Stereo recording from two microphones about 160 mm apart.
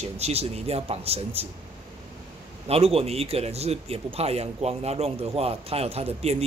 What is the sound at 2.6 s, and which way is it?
Speech, 35° right (ahead or behind).